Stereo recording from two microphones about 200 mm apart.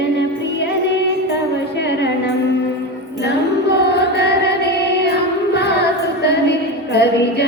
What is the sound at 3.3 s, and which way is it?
Music, 55° left (ahead or behind).